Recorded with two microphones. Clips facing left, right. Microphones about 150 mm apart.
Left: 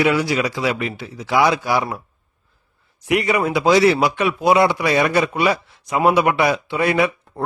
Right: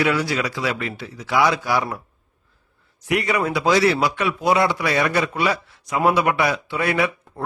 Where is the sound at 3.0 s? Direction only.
20° left (ahead or behind).